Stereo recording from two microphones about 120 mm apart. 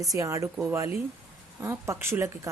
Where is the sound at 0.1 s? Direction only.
25° right (ahead or behind).